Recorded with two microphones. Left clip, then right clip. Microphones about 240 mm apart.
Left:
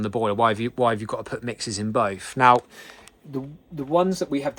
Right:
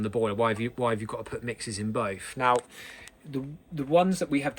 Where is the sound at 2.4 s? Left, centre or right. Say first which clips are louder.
Left 8 dB; left.